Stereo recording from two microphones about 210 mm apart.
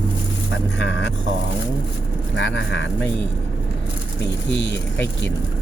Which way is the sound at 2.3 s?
60° left (ahead or behind).